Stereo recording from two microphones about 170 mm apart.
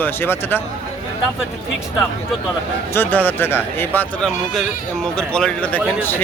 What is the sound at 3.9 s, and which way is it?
Speech, centre (ahead or behind).